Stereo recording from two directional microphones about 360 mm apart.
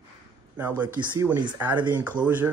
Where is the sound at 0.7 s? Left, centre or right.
Centre.